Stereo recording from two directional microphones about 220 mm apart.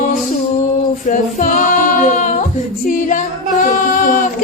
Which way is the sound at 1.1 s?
35° left (ahead or behind).